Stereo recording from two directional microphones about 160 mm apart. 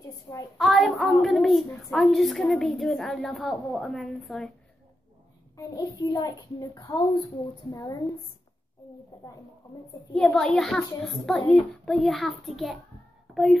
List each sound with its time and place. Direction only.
0.0 s a sound: 20° left (ahead or behind)
0.6 s a woman's voice: centre (ahead or behind)
5.6 s a child's voice: 20° left (ahead or behind)
10.1 s a woman's voice: 5° left (ahead or behind)